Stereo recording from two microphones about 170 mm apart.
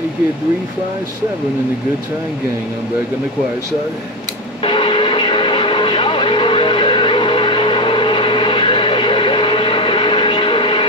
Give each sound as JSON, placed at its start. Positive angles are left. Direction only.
{"t": 4.6, "sound": "vehicle", "side_deg": 30}